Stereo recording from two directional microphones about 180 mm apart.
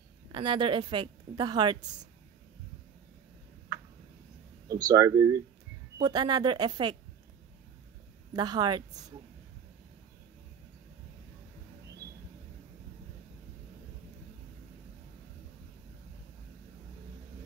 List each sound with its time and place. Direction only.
0.3 s a woman's voice: 25° right (ahead or behind)
4.6 s a woman's voice: 20° right (ahead or behind)
8.3 s a woman's voice: 25° right (ahead or behind)